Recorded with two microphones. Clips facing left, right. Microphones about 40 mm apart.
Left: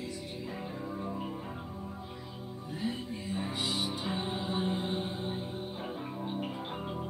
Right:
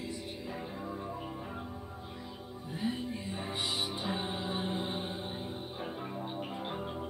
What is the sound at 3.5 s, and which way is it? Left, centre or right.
Music, right.